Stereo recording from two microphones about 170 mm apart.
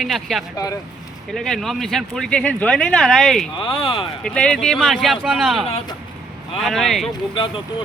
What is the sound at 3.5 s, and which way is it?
Speech, 30° left (ahead or behind).